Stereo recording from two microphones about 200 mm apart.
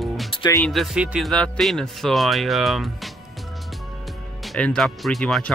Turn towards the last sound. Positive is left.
turn(degrees=0)  # may be behind; listen again after turning